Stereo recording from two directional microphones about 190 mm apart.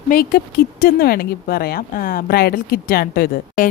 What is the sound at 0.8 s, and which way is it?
A woman's voice, 55° left (ahead or behind).